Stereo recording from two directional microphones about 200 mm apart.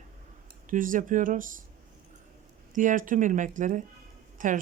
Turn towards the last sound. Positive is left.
turn(degrees=-40)  # may be behind; listen again after turning